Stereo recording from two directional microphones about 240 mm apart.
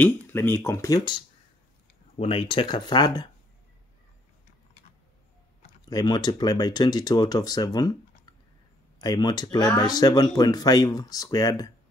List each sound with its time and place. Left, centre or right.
0.0 s speech: centre
5.9 s speech: centre
9.0 s speech: centre